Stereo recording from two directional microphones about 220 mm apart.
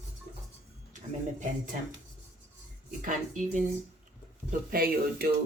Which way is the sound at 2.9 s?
35° right (ahead or behind).